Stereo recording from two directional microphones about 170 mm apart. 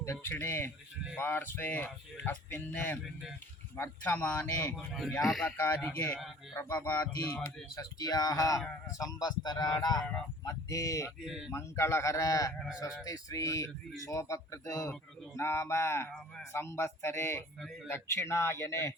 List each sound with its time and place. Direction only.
0.0 s speech: 15° left (ahead or behind)
4.9 s speech: centre (ahead or behind)
7.4 s speech: 20° left (ahead or behind)
10.0 s speech: 5° left (ahead or behind)
10.4 s speech: 20° left (ahead or behind)
11.3 s speech: 5° right (ahead or behind)
11.5 s speech: 15° left (ahead or behind)